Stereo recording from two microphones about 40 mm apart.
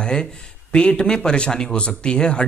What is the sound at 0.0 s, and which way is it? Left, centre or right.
Speech, left.